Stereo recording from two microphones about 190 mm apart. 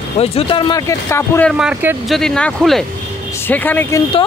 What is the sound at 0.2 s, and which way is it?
Speech, 30° left (ahead or behind).